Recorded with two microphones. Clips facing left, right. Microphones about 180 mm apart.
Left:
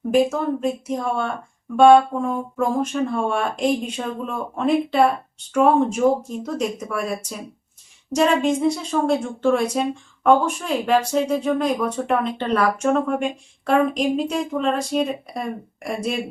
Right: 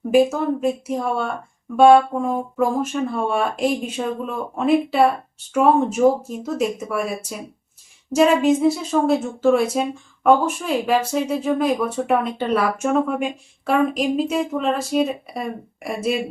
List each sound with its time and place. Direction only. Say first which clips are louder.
0.1 s a woman's voice: right 2 dB; 5° right (ahead or behind)